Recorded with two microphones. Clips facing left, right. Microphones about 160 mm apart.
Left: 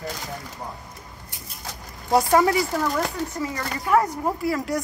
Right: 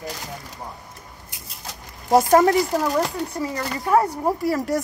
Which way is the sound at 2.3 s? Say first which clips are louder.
Right 3 dB; 40° right (ahead or behind).